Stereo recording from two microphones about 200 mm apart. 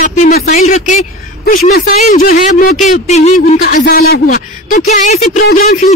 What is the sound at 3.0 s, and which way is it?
Speech, 35° left (ahead or behind).